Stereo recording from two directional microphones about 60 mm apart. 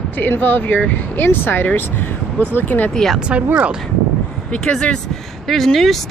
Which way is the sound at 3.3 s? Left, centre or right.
Right.